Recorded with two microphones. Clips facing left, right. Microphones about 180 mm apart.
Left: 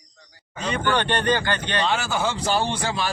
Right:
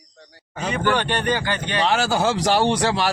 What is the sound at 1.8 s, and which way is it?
Speech, 90° right.